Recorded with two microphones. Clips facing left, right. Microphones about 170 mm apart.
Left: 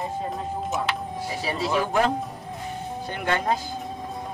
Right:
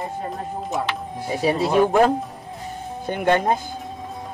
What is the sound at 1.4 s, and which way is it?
Speech, 55° right (ahead or behind).